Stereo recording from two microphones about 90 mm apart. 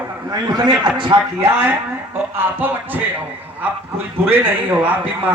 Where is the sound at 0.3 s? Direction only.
50° right (ahead or behind).